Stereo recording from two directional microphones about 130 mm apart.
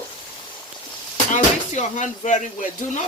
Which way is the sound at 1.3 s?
70° left (ahead or behind).